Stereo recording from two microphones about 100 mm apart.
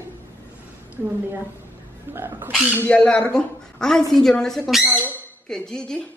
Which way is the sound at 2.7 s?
20° left (ahead or behind).